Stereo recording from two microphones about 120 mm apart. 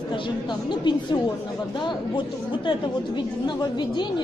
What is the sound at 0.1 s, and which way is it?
Speech, 40° left (ahead or behind).